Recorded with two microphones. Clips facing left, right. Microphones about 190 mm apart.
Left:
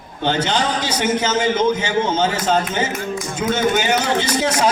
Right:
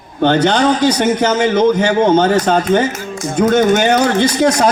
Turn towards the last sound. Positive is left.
turn(degrees=-65)  # may be behind; listen again after turning